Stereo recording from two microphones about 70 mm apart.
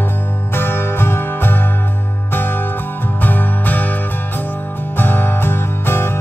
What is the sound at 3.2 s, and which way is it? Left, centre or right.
Music, left.